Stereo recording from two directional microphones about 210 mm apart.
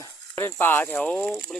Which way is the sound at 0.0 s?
10° left (ahead or behind).